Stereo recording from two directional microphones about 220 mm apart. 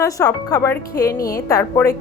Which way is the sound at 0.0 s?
15° left (ahead or behind).